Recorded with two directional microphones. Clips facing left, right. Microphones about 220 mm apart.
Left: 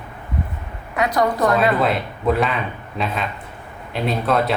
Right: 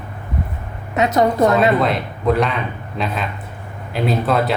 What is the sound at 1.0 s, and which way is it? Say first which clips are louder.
Speech: right 4 dB; 25° right (ahead or behind).